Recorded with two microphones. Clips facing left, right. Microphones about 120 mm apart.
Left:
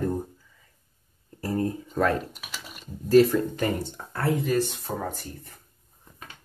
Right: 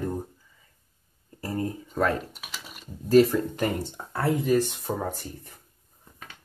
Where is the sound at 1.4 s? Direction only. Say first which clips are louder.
Left 3 dB; 35° left (ahead or behind).